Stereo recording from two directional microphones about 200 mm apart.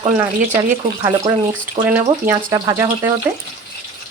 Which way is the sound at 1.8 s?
10° right (ahead or behind).